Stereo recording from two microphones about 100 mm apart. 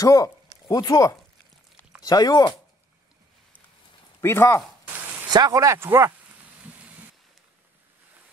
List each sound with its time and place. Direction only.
0.0 s speech: 35° left (ahead or behind)
4.2 s speech: 25° left (ahead or behind)
5.3 s speech: 40° right (ahead or behind)